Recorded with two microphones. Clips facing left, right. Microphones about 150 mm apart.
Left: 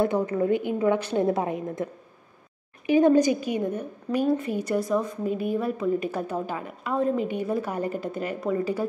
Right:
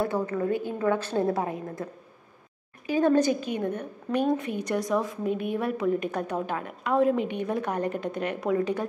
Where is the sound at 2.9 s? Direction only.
15° left (ahead or behind).